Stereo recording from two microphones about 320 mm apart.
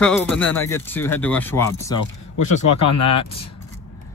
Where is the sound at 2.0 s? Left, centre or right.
Left.